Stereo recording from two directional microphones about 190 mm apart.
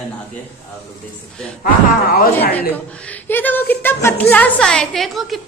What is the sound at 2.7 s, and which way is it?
A woman's voice, 5° left (ahead or behind).